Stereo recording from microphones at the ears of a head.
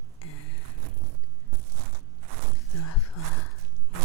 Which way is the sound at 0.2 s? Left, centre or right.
Left.